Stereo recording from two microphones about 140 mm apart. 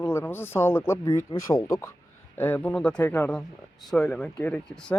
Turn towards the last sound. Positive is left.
turn(degrees=10)  # may be behind; listen again after turning